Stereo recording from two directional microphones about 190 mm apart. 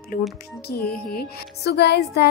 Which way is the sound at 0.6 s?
55° left (ahead or behind).